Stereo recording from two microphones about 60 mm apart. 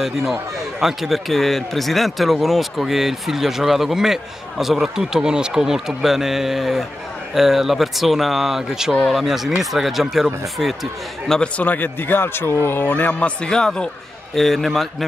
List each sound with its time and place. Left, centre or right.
0.0 s speech: centre
11.2 s a man's voice: centre
11.5 s a man's voice: left; by 15.0 s centre